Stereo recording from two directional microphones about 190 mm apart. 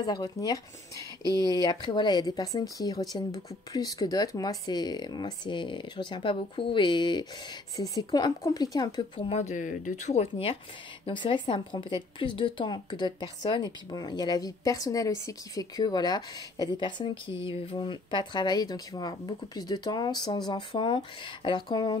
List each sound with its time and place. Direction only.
0.0 s a woman's voice: 20° left (ahead or behind)
1.2 s speech: 20° right (ahead or behind)
1.5 s a woman's voice: 20° left (ahead or behind)